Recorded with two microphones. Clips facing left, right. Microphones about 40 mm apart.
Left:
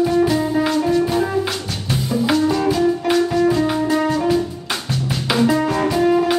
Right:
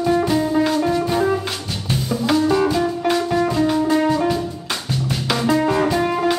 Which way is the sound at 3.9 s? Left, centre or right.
Centre.